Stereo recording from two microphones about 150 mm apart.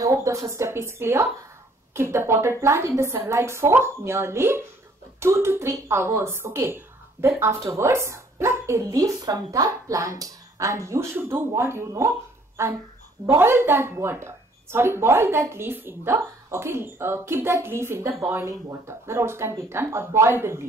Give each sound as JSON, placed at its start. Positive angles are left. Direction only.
{"t": 0.0, "sound": "a woman's voice", "side_deg": -20}